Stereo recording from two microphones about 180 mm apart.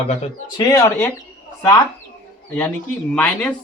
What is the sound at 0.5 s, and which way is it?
Speech, 20° left (ahead or behind).